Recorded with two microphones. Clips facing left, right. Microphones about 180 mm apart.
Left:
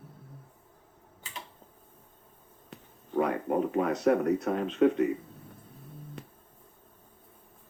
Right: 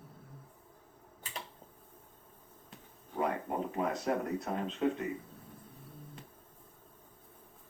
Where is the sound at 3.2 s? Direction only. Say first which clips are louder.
Left 6 dB; 65° left (ahead or behind).